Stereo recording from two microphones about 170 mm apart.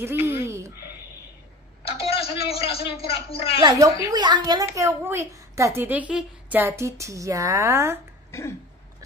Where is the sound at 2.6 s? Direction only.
35° left (ahead or behind).